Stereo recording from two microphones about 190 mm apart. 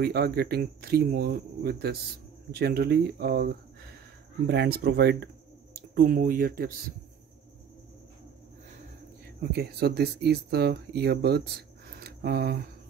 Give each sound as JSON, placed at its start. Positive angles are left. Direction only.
{"t": 0.0, "sound": "speech", "side_deg": -55}
{"t": 4.5, "sound": "speech", "side_deg": -60}
{"t": 9.4, "sound": "speech", "side_deg": -60}
{"t": 12.0, "sound": "a sound", "side_deg": -55}